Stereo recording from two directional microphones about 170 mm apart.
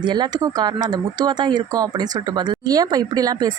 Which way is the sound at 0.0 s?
25° right (ahead or behind).